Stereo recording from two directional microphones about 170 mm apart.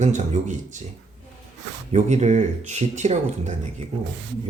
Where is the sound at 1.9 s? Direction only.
40° right (ahead or behind).